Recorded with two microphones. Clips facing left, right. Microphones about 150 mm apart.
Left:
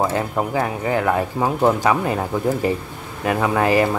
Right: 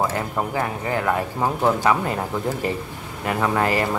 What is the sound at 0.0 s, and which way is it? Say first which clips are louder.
Speech: left 3 dB; 15° left (ahead or behind).